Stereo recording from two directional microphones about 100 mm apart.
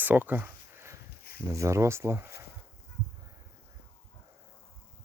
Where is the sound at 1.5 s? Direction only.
30° right (ahead or behind).